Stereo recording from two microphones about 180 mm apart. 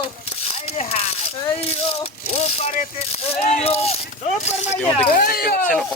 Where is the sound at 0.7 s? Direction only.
35° left (ahead or behind).